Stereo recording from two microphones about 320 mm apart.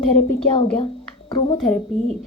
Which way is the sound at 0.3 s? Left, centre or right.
Centre.